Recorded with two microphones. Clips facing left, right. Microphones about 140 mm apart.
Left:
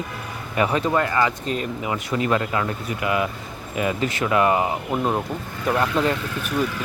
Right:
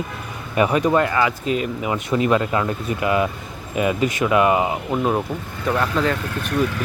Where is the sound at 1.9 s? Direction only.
25° right (ahead or behind).